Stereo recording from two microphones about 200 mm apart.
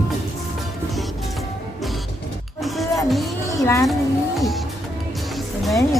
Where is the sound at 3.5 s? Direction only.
15° left (ahead or behind).